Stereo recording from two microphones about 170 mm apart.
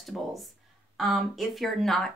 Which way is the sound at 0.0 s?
Centre (ahead or behind).